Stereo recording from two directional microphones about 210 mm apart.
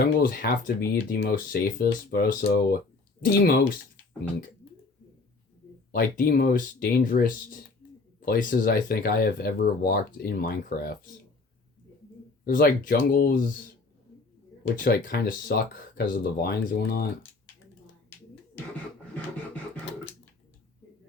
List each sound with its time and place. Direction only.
0.0 s speech: 45° left (ahead or behind)
5.9 s speech: 45° left (ahead or behind)
7.8 s a sound: 65° left (ahead or behind)
8.2 s speech: 40° left (ahead or behind)
12.5 s speech: 45° left (ahead or behind)
14.8 s speech: 45° left (ahead or behind)